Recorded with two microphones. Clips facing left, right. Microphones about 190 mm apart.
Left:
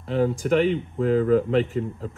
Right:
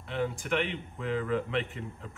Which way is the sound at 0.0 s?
40° left (ahead or behind).